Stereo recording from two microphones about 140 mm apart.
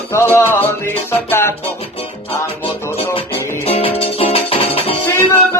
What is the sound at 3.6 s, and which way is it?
Music, 45° left (ahead or behind).